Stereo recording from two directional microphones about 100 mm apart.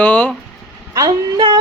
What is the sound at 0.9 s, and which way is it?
Speech, 40° right (ahead or behind).